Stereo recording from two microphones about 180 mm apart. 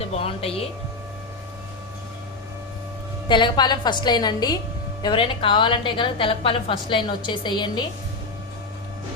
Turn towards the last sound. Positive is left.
turn(degrees=25)  # may be behind; listen again after turning